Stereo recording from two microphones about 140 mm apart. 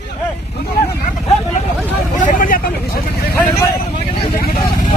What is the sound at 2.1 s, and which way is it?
Speech, 65° left (ahead or behind).